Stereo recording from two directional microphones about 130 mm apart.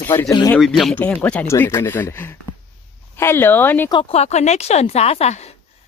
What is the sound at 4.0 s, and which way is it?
A woman's voice, 55° left (ahead or behind).